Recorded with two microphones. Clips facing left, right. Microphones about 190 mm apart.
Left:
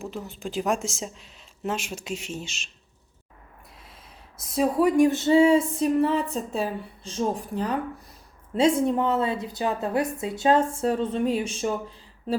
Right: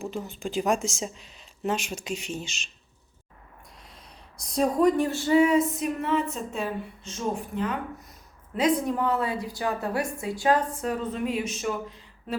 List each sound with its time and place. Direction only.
0.0 s speech: centre (ahead or behind)
4.4 s a woman's voice: 5° left (ahead or behind); by 12.4 s 30° left (ahead or behind)